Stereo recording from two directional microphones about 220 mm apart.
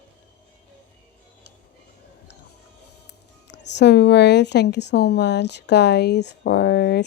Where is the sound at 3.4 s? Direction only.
50° left (ahead or behind).